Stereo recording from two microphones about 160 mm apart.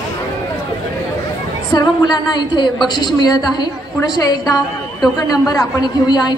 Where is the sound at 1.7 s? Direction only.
25° left (ahead or behind).